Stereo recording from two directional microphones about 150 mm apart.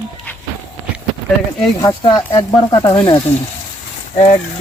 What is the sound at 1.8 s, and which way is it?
Speech, 25° left (ahead or behind).